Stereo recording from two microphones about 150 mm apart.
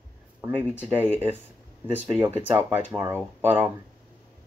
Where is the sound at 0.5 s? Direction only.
10° left (ahead or behind).